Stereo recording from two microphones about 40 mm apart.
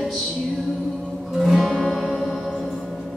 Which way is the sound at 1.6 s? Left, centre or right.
Centre.